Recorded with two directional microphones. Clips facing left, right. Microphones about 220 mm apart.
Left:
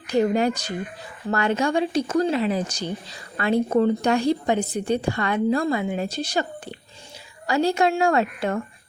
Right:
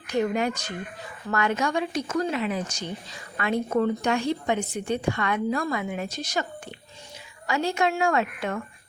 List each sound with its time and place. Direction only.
0.1 s speech: 35° left (ahead or behind)